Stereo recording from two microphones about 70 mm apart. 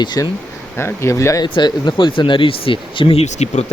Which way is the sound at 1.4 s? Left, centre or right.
Left.